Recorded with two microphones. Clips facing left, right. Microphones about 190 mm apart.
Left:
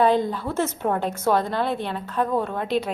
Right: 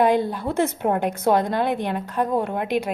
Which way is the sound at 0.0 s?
10° right (ahead or behind).